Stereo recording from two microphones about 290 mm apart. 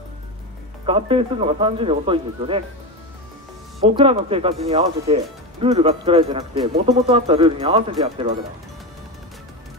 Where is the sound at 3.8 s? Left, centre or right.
Centre.